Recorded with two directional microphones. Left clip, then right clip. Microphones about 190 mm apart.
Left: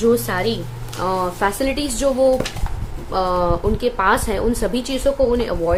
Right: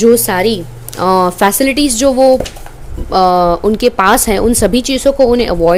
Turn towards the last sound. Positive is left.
turn(degrees=-40)  # may be behind; listen again after turning